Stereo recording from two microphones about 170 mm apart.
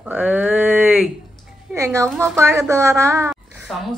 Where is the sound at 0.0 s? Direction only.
5° right (ahead or behind).